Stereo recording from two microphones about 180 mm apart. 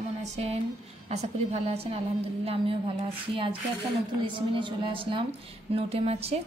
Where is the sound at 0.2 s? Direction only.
35° right (ahead or behind).